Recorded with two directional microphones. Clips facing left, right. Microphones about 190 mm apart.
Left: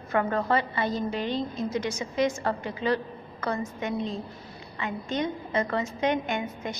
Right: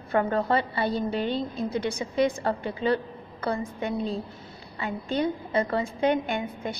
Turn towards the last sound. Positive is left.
turn(degrees=-35)  # may be behind; listen again after turning